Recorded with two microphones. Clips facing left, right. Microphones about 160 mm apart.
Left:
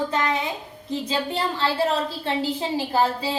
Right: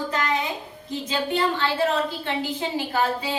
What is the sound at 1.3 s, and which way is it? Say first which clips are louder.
A woman's voice: right 1 dB; 30° left (ahead or behind).